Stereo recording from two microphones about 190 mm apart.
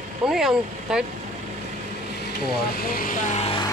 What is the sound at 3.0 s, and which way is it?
Speech, 45° left (ahead or behind).